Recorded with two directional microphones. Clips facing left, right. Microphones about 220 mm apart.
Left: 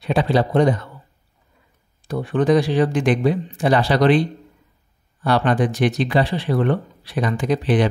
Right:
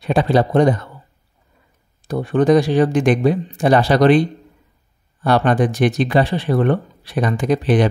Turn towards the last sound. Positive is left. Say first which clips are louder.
# right 2 dB
turn(degrees=-45)  # may be behind; listen again after turning